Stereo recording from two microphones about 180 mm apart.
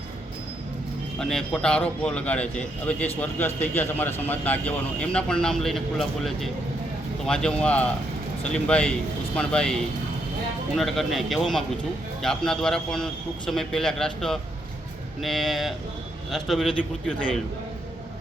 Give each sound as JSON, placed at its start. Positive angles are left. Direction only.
{"t": 1.2, "sound": "a man's voice", "side_deg": 5}
{"t": 10.8, "sound": "a man's voice", "side_deg": 0}